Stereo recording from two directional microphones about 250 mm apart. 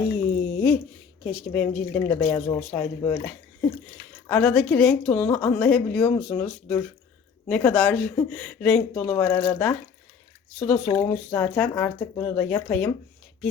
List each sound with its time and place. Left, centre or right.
0.0 s a sound: centre
1.2 s a woman's voice: centre
10.8 s speech: centre
11.1 s speech: centre